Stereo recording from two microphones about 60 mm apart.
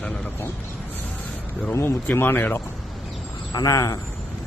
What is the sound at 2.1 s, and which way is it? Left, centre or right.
Speech, left.